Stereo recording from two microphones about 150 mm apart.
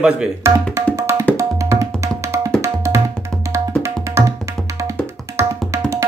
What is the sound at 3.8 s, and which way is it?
Tabla, 20° right (ahead or behind).